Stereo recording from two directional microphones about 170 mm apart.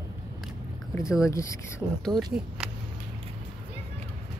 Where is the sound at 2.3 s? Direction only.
5° right (ahead or behind).